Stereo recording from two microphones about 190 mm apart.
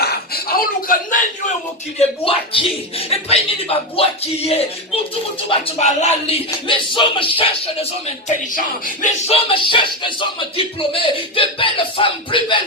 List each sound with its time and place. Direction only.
0.0 s a sound: 55° left (ahead or behind)
2.0 s speech: 30° left (ahead or behind)
5.5 s music: 30° left (ahead or behind)
8.5 s music: 40° left (ahead or behind); by 12.6 s 25° left (ahead or behind)